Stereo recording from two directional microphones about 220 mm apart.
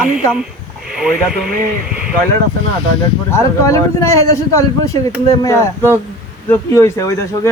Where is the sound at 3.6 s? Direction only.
15° left (ahead or behind).